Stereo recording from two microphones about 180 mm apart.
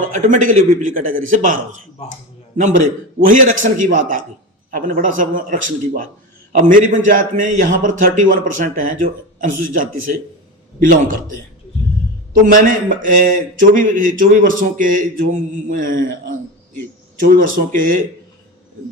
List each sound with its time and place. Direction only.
0.1 s a man's voice: 45° right (ahead or behind)
3.2 s a man's voice: 45° right (ahead or behind)